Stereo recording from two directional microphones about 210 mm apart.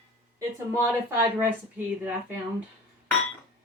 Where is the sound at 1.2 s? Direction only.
10° right (ahead or behind).